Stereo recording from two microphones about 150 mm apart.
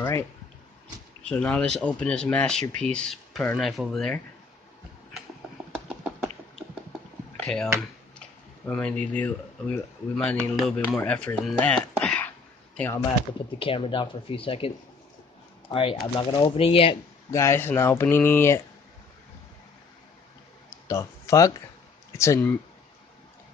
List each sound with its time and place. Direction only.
1.3 s speech: 10° left (ahead or behind)
7.4 s speech: 5° left (ahead or behind)
13.6 s speech: 35° left (ahead or behind)
15.7 s speech: 35° left (ahead or behind)
17.3 s speech: 20° left (ahead or behind)
20.8 s speech: 20° left (ahead or behind)